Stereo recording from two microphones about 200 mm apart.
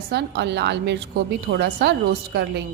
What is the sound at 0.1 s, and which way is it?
A woman's voice, 60° right (ahead or behind).